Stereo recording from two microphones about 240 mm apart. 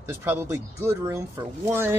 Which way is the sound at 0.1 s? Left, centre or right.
Centre.